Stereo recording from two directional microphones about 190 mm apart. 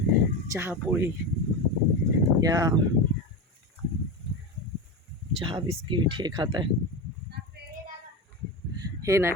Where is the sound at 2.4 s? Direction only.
20° right (ahead or behind).